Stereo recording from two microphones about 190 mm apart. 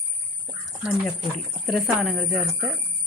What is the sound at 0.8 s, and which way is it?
Speech, 5° right (ahead or behind).